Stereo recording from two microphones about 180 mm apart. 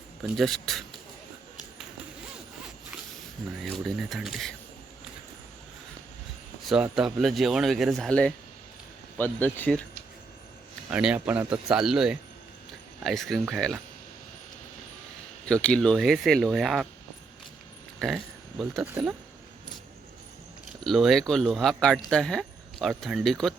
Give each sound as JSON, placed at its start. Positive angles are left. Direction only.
{"t": 0.3, "sound": "speech", "side_deg": 0}
{"t": 3.6, "sound": "speech", "side_deg": 0}
{"t": 6.7, "sound": "speech", "side_deg": -5}
{"t": 10.8, "sound": "speech", "side_deg": -10}
{"t": 15.4, "sound": "speech", "side_deg": 5}
{"t": 18.0, "sound": "speech", "side_deg": 0}
{"t": 20.8, "sound": "speech", "side_deg": 0}